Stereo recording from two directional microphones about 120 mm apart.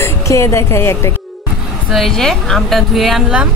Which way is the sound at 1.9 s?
Centre (ahead or behind).